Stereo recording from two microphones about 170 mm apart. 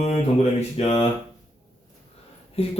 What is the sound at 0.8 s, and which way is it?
Speech, 35° left (ahead or behind).